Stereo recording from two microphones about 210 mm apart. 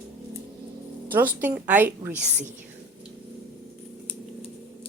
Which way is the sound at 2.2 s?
35° right (ahead or behind).